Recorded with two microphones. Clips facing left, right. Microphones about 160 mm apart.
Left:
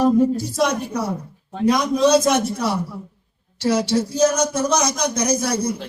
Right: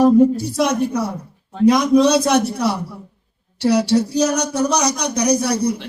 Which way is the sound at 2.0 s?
65° right (ahead or behind).